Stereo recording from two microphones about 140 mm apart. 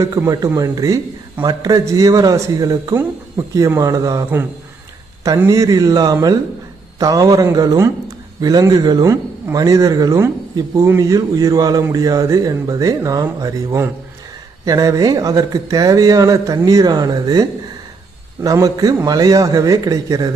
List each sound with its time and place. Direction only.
0.0 s a man's voice: 25° right (ahead or behind)
5.5 s a man's voice: 25° right (ahead or behind)